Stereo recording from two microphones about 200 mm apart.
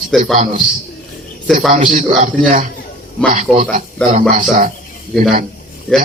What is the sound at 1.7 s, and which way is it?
Speech, 40° right (ahead or behind).